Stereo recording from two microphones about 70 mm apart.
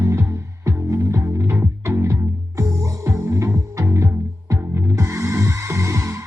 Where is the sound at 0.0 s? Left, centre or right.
Right.